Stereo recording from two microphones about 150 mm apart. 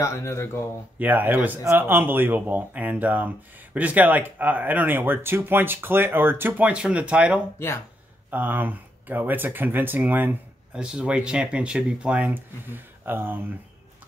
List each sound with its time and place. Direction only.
0.0 s speech: 20° left (ahead or behind)
0.9 s speech: 10° right (ahead or behind)
7.5 s speech: 15° left (ahead or behind)
8.3 s speech: 10° right (ahead or behind)